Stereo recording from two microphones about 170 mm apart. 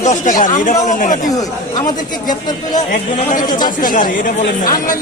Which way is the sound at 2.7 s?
50° left (ahead or behind).